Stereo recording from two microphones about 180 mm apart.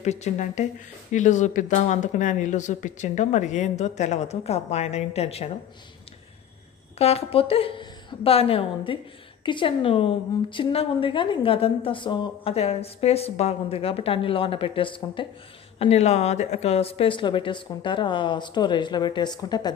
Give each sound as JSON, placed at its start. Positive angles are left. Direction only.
{"t": 0.0, "sound": "speech", "side_deg": 40}
{"t": 7.0, "sound": "a woman's voice", "side_deg": 35}